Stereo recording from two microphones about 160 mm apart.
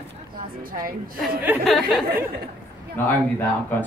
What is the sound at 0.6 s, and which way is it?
Speech, 60° right (ahead or behind).